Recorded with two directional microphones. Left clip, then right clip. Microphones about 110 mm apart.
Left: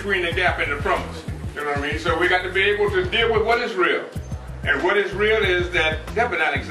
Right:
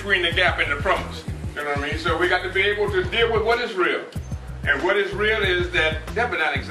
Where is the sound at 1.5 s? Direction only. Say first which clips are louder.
Left 1 dB; centre (ahead or behind).